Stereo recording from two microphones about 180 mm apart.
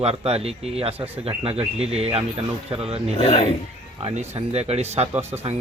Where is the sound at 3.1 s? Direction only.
30° left (ahead or behind).